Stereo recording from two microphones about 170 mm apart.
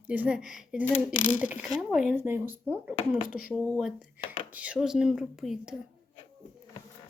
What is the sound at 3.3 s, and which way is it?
Speech, 55° left (ahead or behind).